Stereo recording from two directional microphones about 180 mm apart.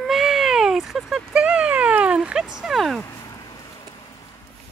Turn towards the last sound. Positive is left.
turn(degrees=20)  # may be behind; listen again after turning